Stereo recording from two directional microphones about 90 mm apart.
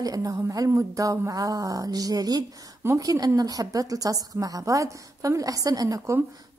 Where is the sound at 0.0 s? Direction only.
40° right (ahead or behind).